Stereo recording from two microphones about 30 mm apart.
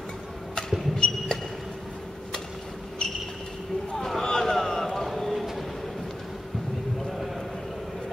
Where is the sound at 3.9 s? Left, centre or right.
Centre.